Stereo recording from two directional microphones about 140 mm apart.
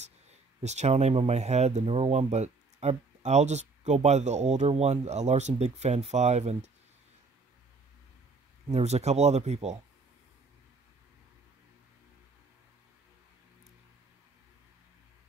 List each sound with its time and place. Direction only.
0.0 s speech: 55° right (ahead or behind)
8.6 s speech: 50° right (ahead or behind)